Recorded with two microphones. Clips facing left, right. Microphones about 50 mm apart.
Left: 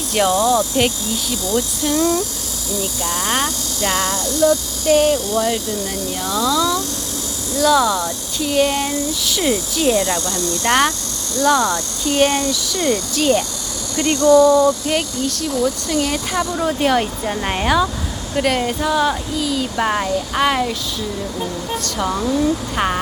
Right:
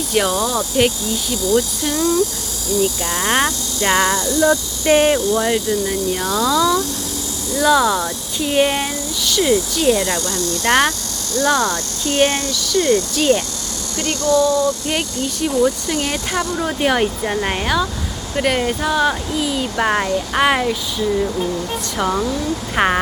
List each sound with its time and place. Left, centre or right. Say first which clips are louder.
0.1 s speech: left 3 dB; centre
3.0 s speech: right 2 dB; centre; by 5.2 s right
5.9 s speech: right 3 dB; centre
8.9 s speech: left 1 dB; centre
10.1 s speech: even; centre
12.5 s speech: right 3 dB; centre
13.9 s speech: left 5 dB; left
15.6 s speech: right 1 dB; centre
18.3 s speech: even; centre
21.9 s speech: even; centre